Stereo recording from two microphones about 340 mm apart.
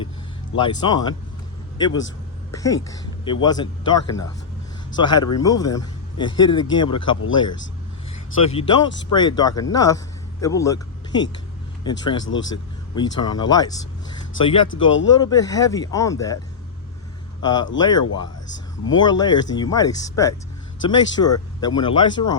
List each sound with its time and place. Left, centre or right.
0.6 s a man's voice: centre
1.9 s speech: left
2.5 s a man's voice: centre
8.5 s a man's voice: centre
12.2 s speech: left
13.0 s a man's voice: centre
14.7 s speech: left
15.2 s a man's voice: centre
17.4 s a man's voice: centre